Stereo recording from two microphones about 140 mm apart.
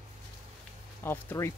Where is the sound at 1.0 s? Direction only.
15° left (ahead or behind).